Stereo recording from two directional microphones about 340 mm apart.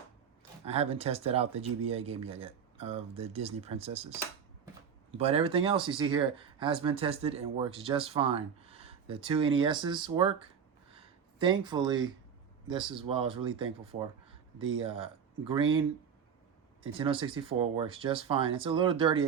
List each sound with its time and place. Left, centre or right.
0.6 s speech: centre
5.1 s speech: centre
11.3 s speech: centre
14.8 s speech: centre
17.0 s speech: centre